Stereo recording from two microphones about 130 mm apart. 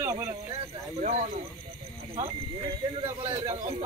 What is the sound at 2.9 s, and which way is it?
Speech, 45° right (ahead or behind).